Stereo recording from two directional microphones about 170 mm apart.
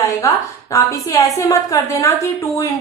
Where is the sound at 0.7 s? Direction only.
20° left (ahead or behind).